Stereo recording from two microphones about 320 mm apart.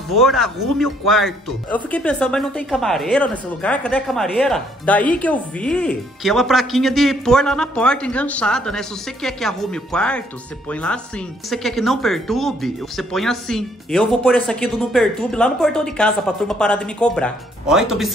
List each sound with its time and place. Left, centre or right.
0.1 s speech: centre